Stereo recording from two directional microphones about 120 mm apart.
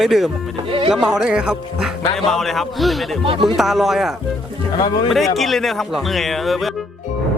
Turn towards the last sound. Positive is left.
turn(degrees=0)  # may be behind; listen again after turning